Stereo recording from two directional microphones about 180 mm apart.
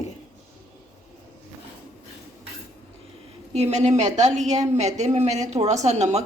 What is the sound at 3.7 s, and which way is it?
A woman's voice, 40° right (ahead or behind).